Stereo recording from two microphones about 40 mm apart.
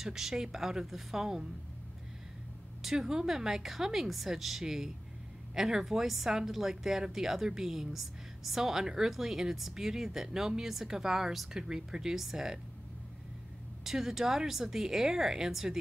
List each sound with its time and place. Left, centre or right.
0.0 s a woman's voice: centre
2.8 s a woman's voice: centre
13.8 s a woman's voice: centre